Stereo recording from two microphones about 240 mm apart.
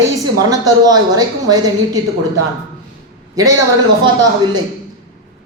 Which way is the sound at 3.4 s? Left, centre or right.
Centre.